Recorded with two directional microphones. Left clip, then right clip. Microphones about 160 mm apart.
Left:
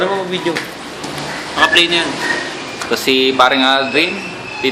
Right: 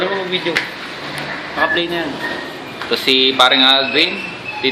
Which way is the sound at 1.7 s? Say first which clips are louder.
Left 6 dB; 30° right (ahead or behind).